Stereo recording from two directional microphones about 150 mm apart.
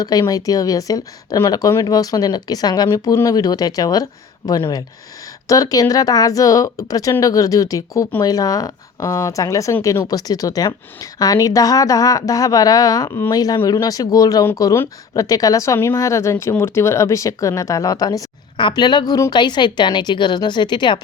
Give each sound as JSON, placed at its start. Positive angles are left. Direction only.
{"t": 0.0, "sound": "speech", "side_deg": 25}